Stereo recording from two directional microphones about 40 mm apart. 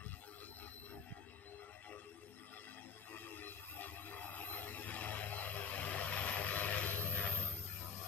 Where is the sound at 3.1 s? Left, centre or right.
Left.